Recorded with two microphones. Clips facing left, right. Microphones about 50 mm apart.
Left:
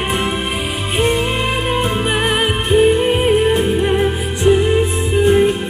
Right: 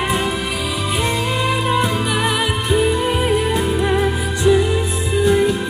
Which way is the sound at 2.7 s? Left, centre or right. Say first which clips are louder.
Left 5 dB; left.